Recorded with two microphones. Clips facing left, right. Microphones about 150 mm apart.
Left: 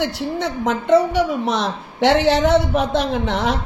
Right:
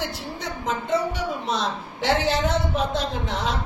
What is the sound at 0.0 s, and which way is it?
A woman's voice, 75° left (ahead or behind).